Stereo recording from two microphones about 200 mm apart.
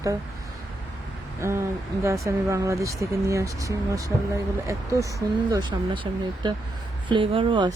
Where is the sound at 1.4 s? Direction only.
15° right (ahead or behind).